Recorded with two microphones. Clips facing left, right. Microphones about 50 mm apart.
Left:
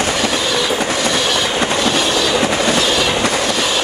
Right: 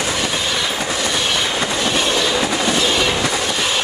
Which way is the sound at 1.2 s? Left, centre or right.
Centre.